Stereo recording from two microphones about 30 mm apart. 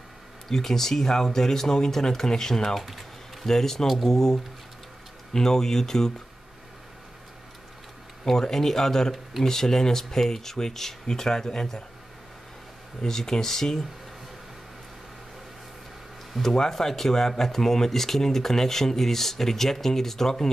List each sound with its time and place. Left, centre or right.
0.5 s speech: centre
2.8 s speech: centre
3.4 s speech: centre
3.8 s speech: centre
4.1 s speech: centre
8.3 s speech: centre
13.0 s speech: centre
16.3 s speech: centre
16.7 s speech: centre